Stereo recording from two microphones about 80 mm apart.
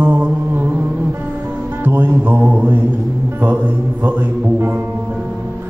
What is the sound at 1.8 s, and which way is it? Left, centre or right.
Music, right.